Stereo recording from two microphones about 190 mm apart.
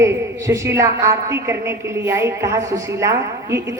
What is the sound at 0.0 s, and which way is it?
A woman's voice, 15° right (ahead or behind).